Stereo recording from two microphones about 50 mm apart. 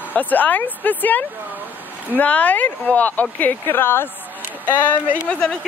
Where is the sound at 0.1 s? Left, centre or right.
Left.